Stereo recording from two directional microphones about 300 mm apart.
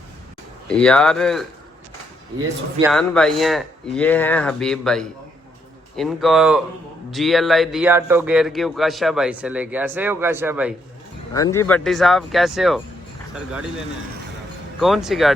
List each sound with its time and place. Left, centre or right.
0.7 s a man's voice: centre
2.9 s a man's voice: centre
11.3 s a man's voice: centre
14.8 s a man's voice: centre